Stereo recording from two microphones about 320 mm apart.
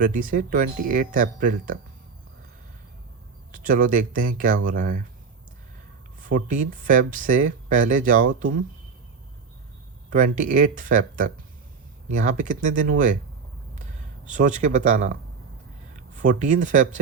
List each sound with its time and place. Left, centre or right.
0.0 s speech: right
3.5 s speech: right
6.1 s speech: right
10.1 s speech: right
14.3 s speech: right